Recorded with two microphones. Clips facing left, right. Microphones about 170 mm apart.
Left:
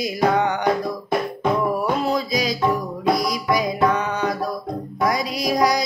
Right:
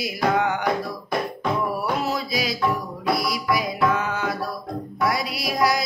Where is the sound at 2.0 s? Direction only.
5° right (ahead or behind).